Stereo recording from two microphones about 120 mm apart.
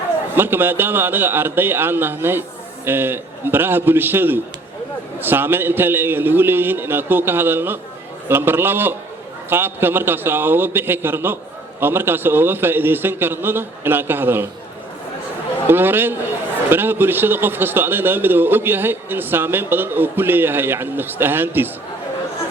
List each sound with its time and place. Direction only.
0.3 s a man's voice: 15° right (ahead or behind)
15.6 s a man's voice: 15° right (ahead or behind)